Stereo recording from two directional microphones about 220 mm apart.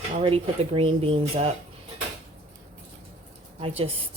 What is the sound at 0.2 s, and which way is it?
Speech, 25° right (ahead or behind).